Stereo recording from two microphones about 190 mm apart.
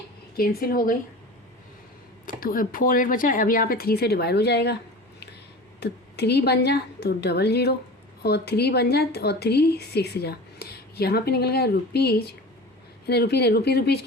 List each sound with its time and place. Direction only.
0.3 s speech: 50° left (ahead or behind)
2.2 s speech: 45° left (ahead or behind)
5.8 s a woman's voice: 60° left (ahead or behind)